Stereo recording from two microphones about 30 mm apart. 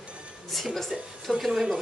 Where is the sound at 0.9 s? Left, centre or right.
Right.